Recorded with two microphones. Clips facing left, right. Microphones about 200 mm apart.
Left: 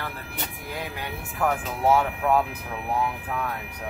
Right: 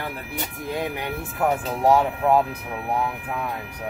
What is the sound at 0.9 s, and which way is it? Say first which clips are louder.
Speech: right 5 dB; 20° right (ahead or behind).